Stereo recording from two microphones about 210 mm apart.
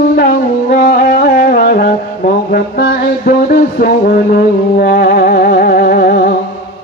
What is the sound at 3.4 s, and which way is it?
Music, 40° left (ahead or behind).